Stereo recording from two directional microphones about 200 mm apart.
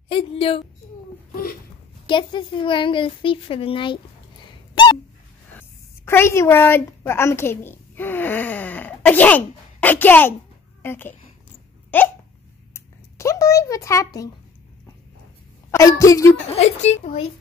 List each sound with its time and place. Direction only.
0.1 s a woman's voice: 25° left (ahead or behind)
1.3 s a sound: 50° left (ahead or behind)
2.0 s speech: 25° left (ahead or behind)
5.6 s a woman's voice: 10° left (ahead or behind)
12.7 s a sound: 15° left (ahead or behind)
15.7 s a woman's voice: 15° left (ahead or behind)
16.5 s a woman's voice: 35° left (ahead or behind)